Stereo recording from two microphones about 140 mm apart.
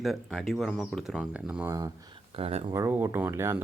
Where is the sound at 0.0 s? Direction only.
Centre (ahead or behind).